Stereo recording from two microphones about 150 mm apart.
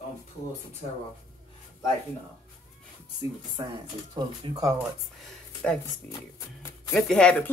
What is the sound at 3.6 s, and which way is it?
Speech, 30° right (ahead or behind).